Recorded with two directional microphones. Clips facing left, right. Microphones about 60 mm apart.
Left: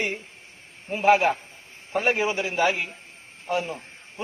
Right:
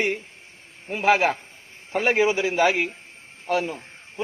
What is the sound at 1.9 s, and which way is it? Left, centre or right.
Speech, right.